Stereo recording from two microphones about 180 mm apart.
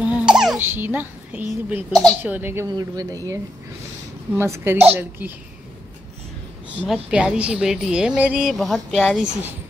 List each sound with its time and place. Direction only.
0.0 s crying: 5° right (ahead or behind)
1.7 s a woman's voice: 10° right (ahead or behind)
4.4 s a woman's voice: 10° right (ahead or behind)
6.9 s a woman's voice: 5° right (ahead or behind)